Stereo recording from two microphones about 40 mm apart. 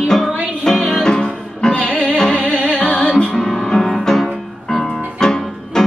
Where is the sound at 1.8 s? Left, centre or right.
Left.